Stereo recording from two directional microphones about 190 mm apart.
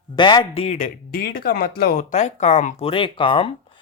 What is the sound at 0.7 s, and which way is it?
Speech, 45° left (ahead or behind).